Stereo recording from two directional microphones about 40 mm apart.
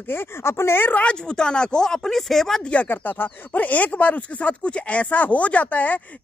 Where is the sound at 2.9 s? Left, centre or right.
Left.